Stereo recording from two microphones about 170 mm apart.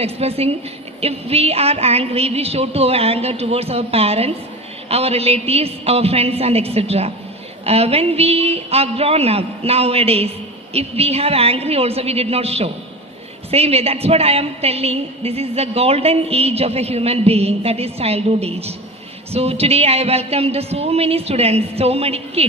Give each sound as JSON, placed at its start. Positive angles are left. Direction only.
{"t": 0.0, "sound": "a woman's voice", "side_deg": -35}